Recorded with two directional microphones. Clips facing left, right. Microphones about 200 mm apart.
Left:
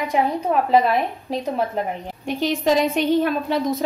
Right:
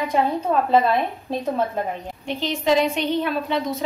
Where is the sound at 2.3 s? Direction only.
45° left (ahead or behind).